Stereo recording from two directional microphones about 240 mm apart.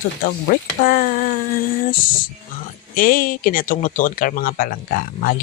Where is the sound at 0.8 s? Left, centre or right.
Left.